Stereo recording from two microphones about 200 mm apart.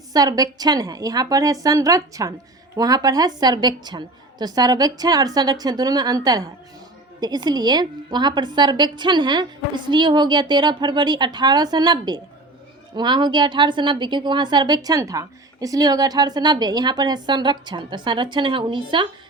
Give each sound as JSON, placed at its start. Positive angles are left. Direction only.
{"t": 0.1, "sound": "a woman's voice", "side_deg": -20}